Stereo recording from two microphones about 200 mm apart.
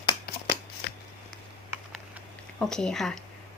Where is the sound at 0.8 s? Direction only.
55° left (ahead or behind).